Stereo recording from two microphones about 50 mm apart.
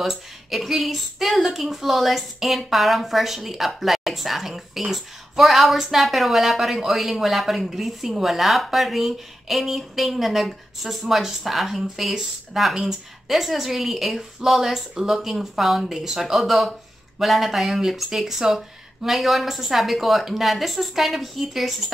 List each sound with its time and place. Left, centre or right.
0.0 s a woman's voice: centre